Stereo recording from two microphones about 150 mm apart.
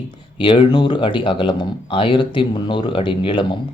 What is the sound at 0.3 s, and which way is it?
Speech, 35° left (ahead or behind).